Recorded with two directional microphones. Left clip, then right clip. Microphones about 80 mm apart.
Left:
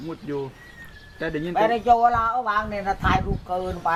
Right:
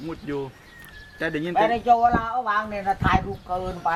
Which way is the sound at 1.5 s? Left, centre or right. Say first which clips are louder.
Left 1 dB; centre.